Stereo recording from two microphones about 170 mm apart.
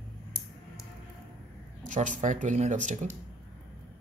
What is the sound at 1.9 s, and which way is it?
Speech, 45° right (ahead or behind).